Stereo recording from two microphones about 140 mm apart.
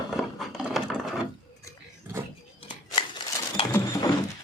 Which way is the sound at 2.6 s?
40° left (ahead or behind).